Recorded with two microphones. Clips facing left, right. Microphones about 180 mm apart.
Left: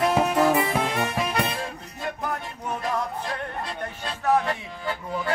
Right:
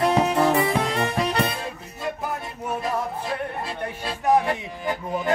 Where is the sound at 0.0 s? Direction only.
5° left (ahead or behind).